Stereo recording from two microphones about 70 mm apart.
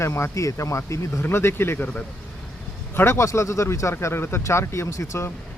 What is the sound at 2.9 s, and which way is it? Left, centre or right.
Speech, left.